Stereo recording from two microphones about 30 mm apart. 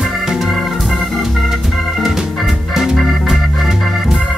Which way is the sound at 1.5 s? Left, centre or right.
Centre.